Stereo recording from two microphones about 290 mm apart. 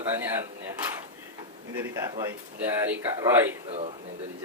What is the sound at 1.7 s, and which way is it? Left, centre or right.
Speech, centre.